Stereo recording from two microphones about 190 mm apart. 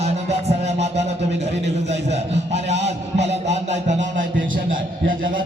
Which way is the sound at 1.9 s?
35° right (ahead or behind).